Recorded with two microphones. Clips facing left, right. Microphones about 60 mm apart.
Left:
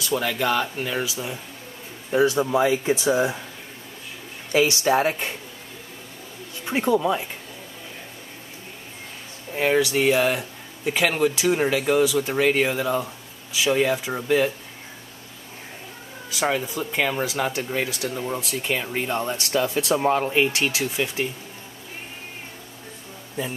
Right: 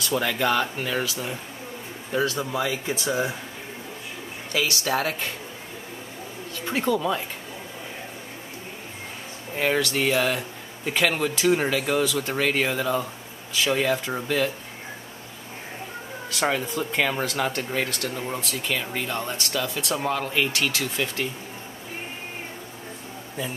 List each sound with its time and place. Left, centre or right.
0.0 s speech: centre
2.1 s speech: centre
4.5 s speech: left
6.6 s speech: centre
9.5 s speech: centre
16.3 s speech: centre
18.5 s speech: left